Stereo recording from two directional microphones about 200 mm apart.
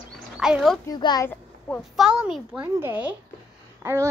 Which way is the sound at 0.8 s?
20° left (ahead or behind).